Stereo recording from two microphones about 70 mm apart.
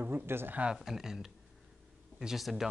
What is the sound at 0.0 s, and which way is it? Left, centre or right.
Speech, right.